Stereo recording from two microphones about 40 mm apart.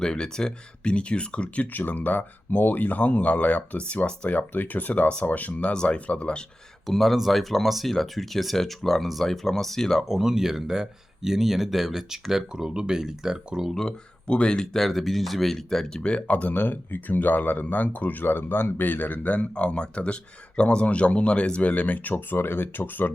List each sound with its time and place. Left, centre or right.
0.0 s speech: centre
1.6 s speech: left
4.3 s speech: left
5.7 s speech: left
6.8 s speech: centre
10.1 s speech: centre
12.5 s speech: centre
14.3 s speech: left
14.8 s speech: centre
16.0 s speech: left
18.9 s speech: left
19.4 s speech: left
21.7 s speech: left